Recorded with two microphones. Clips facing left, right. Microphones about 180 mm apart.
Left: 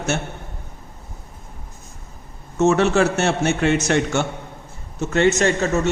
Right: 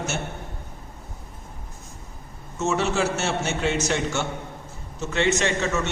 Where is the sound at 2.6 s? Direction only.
60° left (ahead or behind).